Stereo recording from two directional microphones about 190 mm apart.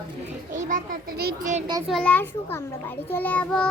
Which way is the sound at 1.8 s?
5° left (ahead or behind).